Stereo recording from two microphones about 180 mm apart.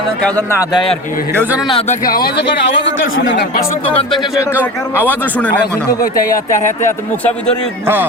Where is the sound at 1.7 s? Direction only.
30° left (ahead or behind).